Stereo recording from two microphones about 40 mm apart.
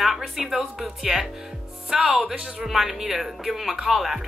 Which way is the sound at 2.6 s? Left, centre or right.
Centre.